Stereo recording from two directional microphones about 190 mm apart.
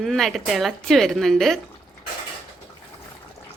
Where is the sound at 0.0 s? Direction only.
Centre (ahead or behind).